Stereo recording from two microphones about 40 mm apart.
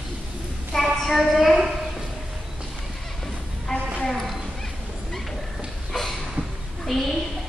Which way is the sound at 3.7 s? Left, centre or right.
Centre.